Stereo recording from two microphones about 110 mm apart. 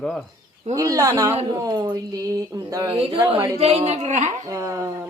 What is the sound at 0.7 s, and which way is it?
Speech, 30° right (ahead or behind).